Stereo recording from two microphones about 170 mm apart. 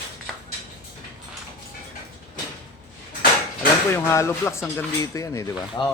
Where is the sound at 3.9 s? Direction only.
15° left (ahead or behind).